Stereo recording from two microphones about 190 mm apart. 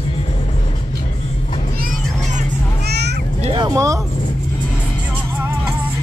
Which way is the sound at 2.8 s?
60° right (ahead or behind).